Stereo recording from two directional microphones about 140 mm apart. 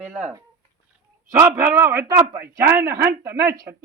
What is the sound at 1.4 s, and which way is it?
A man's voice, 15° right (ahead or behind).